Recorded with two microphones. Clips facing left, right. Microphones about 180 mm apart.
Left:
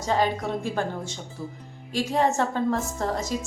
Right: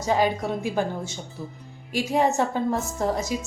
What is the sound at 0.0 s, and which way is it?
Speech, 10° right (ahead or behind).